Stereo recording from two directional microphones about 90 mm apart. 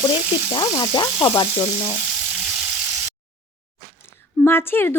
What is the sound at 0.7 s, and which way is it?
Sizzle, 45° left (ahead or behind).